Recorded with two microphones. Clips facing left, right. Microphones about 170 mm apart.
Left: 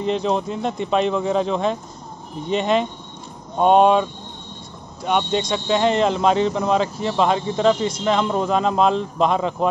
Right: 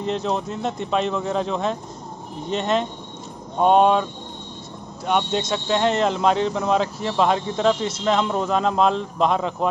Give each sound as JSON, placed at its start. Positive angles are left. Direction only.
{"t": 0.0, "sound": "speech", "side_deg": 0}